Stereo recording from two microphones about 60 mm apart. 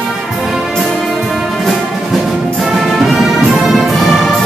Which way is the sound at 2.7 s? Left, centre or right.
Centre.